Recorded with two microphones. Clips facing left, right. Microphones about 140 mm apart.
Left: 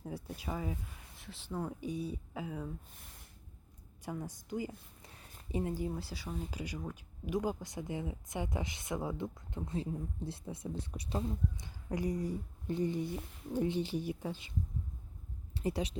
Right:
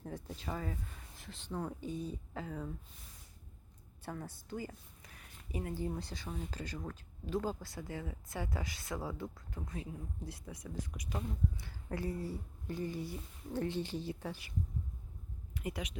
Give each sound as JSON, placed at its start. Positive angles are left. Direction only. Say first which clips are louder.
{"t": 0.0, "sound": "speech", "louder": "left 1 dB", "side_deg": 10}
{"t": 4.0, "sound": "speech", "louder": "left 3 dB", "side_deg": 10}
{"t": 5.0, "sound": "a sound", "louder": "left 2 dB", "side_deg": 30}
{"t": 5.5, "sound": "speech", "louder": "left 5 dB", "side_deg": 25}
{"t": 5.7, "sound": "speech", "louder": "left 1 dB", "side_deg": 10}
{"t": 11.5, "sound": "speech", "louder": "left 3 dB", "side_deg": 15}
{"t": 15.5, "sound": "speech", "louder": "left 6 dB", "side_deg": 30}